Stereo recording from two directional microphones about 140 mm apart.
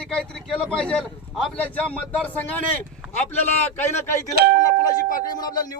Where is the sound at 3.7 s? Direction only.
15° left (ahead or behind).